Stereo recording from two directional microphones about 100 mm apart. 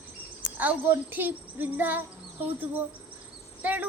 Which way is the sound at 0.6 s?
15° right (ahead or behind).